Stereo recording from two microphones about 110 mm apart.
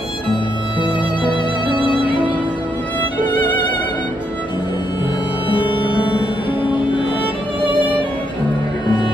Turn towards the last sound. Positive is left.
turn(degrees=50)  # may be behind; listen again after turning